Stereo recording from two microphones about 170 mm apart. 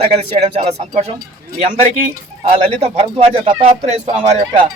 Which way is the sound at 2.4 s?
45° right (ahead or behind).